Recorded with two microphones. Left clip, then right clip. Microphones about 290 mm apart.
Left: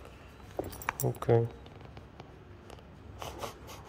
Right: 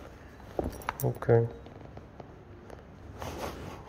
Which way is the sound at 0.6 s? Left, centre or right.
Right.